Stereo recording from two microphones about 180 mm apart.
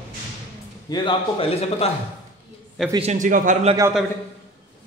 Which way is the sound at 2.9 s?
35° right (ahead or behind).